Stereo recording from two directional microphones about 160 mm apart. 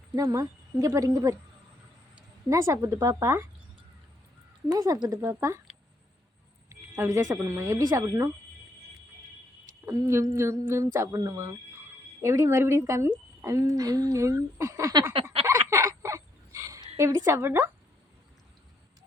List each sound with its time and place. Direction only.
0.2 s speech: 20° right (ahead or behind)
2.5 s humming: 15° right (ahead or behind)
4.7 s speech: 25° right (ahead or behind)
5.0 s humming: 20° right (ahead or behind)
6.7 s speech: 15° right (ahead or behind)
9.8 s humming: 20° right (ahead or behind)
12.2 s speech: 15° right (ahead or behind)
15.1 s a sound: 35° right (ahead or behind)
15.4 s fowl: 20° right (ahead or behind)
17.2 s humming: 15° right (ahead or behind)